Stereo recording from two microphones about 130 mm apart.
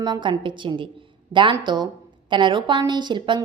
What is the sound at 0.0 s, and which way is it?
A woman's voice, 35° right (ahead or behind).